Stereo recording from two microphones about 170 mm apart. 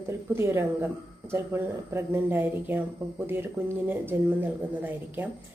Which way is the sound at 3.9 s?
10° right (ahead or behind).